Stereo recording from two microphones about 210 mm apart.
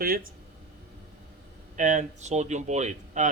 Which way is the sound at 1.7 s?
35° right (ahead or behind).